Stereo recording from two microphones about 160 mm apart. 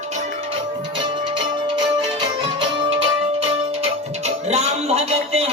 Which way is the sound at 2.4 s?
30° right (ahead or behind).